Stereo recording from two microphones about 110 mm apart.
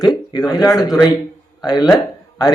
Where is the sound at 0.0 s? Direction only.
35° left (ahead or behind).